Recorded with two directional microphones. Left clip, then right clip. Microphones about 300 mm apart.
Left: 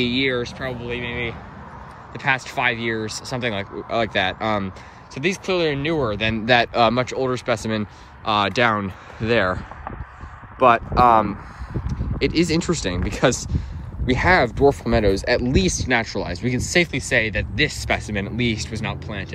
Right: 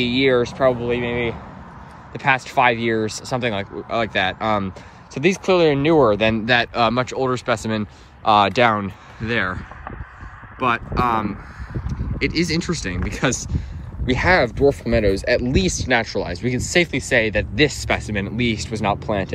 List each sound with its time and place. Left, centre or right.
0.0 s speech: centre